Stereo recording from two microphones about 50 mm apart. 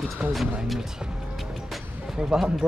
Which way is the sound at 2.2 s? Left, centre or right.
Centre.